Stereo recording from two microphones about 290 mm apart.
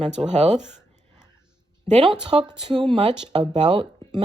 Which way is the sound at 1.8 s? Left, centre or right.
Right.